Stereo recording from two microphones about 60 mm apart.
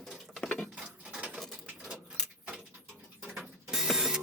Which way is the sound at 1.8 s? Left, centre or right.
Centre.